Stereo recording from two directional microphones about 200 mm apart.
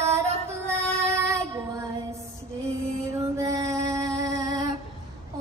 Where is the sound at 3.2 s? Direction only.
15° right (ahead or behind).